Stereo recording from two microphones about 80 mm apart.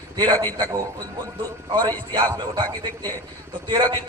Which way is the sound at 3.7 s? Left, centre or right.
Right.